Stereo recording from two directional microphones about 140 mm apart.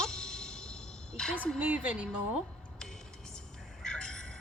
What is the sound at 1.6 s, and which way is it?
Speech, 10° right (ahead or behind).